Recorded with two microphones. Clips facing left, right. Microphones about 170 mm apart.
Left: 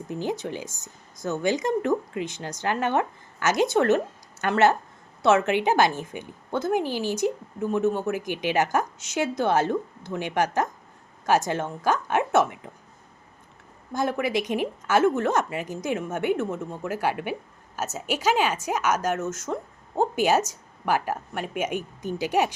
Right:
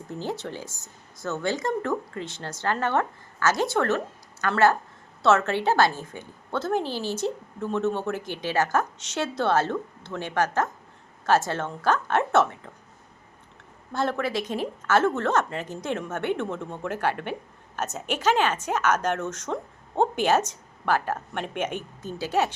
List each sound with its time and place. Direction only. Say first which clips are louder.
0.1 s a woman's voice: left 3 dB; 15° left (ahead or behind)
13.9 s a woman's voice: left 1 dB; 10° left (ahead or behind)